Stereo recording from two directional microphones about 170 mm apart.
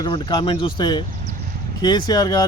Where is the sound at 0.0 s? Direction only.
25° left (ahead or behind).